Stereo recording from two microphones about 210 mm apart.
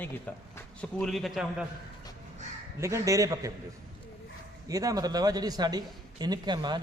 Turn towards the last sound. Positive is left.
turn(degrees=-20)  # may be behind; listen again after turning